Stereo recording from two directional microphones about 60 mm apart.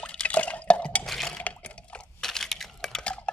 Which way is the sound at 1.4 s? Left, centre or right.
Left.